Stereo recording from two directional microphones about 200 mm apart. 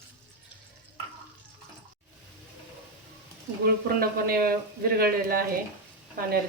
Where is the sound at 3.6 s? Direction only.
50° right (ahead or behind).